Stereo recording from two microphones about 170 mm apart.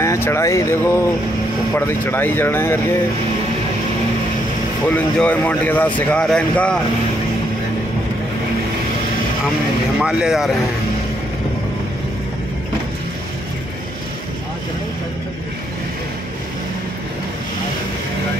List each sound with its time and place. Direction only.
0.0 s speech: 15° left (ahead or behind)
4.8 s speech: 10° left (ahead or behind)
9.9 s speech: 5° right (ahead or behind)